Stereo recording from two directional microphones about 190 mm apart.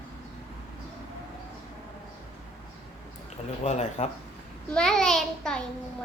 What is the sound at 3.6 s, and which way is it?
Speech, 35° left (ahead or behind).